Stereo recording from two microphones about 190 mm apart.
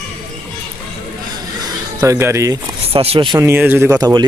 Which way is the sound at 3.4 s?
10° right (ahead or behind).